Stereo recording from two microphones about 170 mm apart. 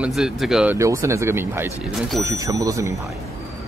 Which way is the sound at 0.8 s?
15° right (ahead or behind).